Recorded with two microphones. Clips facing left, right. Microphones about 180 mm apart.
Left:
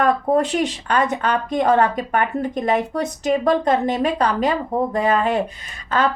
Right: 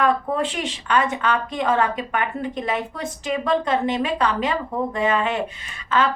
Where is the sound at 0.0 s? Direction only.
40° left (ahead or behind).